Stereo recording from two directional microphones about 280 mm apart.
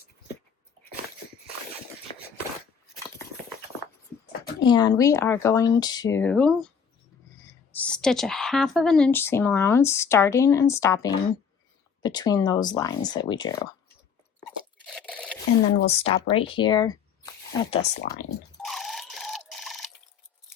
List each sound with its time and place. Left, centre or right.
4.6 s a woman's voice: centre
14.8 s a sound: centre
15.9 s speech: left
18.6 s alarm clock: centre